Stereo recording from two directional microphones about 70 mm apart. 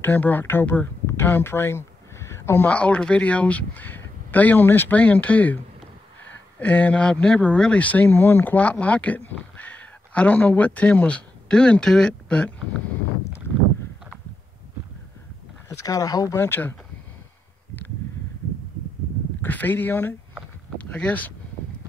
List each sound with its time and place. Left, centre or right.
0.0 s speech: left
1.0 s a sound: left
2.6 s speech: centre
6.6 s speech: left
15.7 s speech: left
16.3 s speech: left
19.4 s speech: left